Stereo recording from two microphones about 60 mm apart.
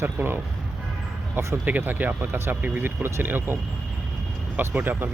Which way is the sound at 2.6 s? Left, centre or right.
Right.